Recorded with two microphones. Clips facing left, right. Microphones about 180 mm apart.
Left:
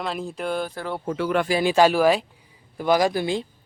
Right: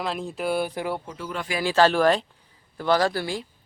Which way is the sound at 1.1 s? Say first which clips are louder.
Left 10 dB; 70° left (ahead or behind).